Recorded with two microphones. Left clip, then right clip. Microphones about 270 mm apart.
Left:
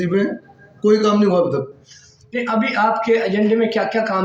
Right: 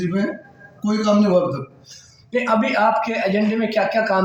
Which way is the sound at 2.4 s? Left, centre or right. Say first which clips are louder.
Even; centre.